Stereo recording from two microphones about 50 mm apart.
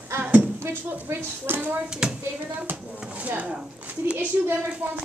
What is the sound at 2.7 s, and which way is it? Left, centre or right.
Speech, right.